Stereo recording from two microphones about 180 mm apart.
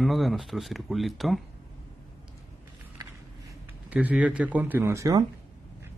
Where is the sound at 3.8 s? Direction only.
5° right (ahead or behind).